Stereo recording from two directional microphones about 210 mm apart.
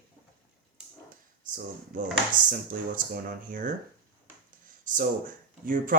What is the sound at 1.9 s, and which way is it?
Speech, 40° right (ahead or behind).